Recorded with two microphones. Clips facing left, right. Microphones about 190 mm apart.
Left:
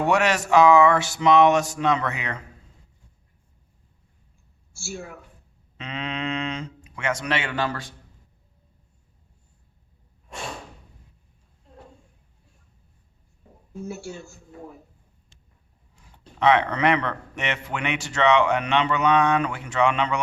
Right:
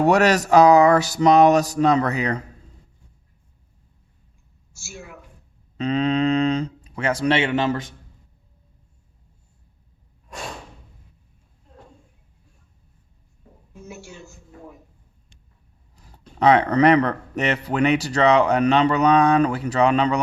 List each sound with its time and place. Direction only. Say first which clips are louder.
0.0 s speech: right 5 dB; 40° right (ahead or behind)
5.7 s speech: right 11 dB; 40° right (ahead or behind); by 7.9 s 20° right (ahead or behind)
16.0 s speech: right 3 dB; 40° right (ahead or behind)